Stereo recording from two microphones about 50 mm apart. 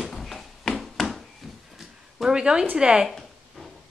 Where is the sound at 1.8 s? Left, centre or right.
Centre.